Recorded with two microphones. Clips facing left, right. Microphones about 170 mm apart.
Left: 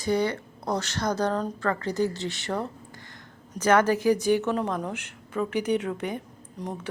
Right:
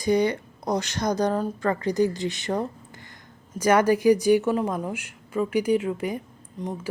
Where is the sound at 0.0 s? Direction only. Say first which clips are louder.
Right 3 dB; 15° right (ahead or behind).